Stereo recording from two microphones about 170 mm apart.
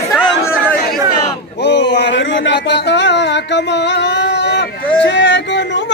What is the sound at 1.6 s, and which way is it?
Speech, 90° left.